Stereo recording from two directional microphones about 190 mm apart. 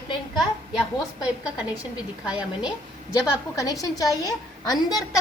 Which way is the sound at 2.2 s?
5° right (ahead or behind).